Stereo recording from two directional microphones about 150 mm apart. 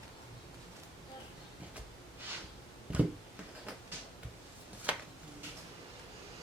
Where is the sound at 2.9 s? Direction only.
5° right (ahead or behind).